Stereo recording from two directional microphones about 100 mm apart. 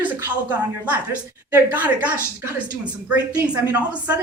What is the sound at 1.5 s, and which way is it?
A woman's voice, 15° right (ahead or behind).